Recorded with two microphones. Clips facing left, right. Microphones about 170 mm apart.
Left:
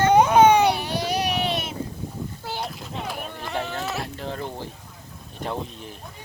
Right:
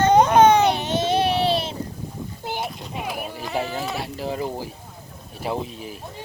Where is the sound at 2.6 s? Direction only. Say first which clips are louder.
Right 2 dB; 5° right (ahead or behind).